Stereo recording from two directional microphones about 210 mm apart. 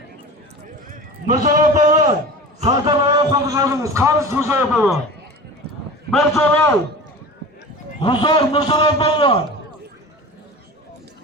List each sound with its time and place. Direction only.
1.4 s a man's voice: 40° right (ahead or behind)
2.6 s a man's voice: 20° right (ahead or behind)
6.1 s a man's voice: centre (ahead or behind)
8.0 s a man's voice: 20° left (ahead or behind)